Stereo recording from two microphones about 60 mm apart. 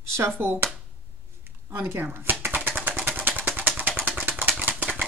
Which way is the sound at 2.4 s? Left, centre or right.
Right.